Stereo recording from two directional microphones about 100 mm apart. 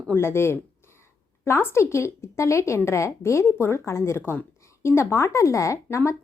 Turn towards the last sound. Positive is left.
turn(degrees=30)  # may be behind; listen again after turning